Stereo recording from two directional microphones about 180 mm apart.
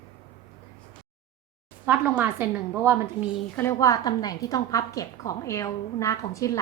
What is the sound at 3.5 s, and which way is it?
A woman's voice, 15° left (ahead or behind).